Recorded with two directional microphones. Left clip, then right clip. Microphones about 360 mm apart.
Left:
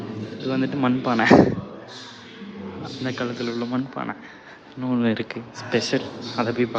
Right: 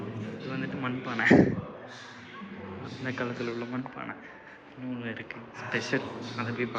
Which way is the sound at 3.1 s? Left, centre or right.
Centre.